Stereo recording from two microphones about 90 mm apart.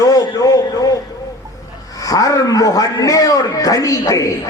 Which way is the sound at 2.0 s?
40° left (ahead or behind).